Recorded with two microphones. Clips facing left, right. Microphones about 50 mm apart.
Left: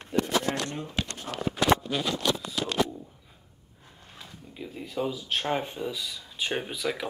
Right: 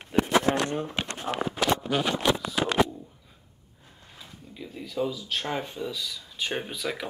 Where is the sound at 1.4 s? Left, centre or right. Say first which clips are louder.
Left 3 dB; right.